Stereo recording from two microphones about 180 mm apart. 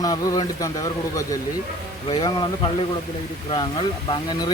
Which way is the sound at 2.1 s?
25° left (ahead or behind).